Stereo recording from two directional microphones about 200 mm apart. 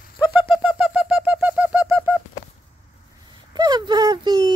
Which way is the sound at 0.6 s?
Centre (ahead or behind).